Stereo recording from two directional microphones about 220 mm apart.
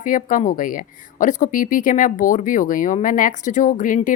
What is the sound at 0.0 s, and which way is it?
Speech, 35° left (ahead or behind).